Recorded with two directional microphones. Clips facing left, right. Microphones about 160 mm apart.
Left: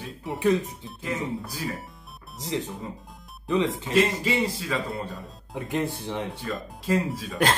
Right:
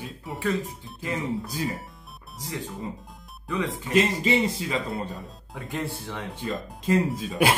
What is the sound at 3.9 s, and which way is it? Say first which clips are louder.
Speech: right 1 dB; 20° right (ahead or behind).